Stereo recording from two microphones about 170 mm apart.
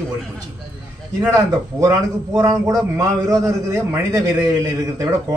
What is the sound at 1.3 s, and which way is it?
A man's voice, 20° right (ahead or behind).